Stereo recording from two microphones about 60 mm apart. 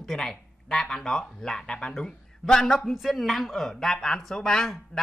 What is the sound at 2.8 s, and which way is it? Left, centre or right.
Speech, centre.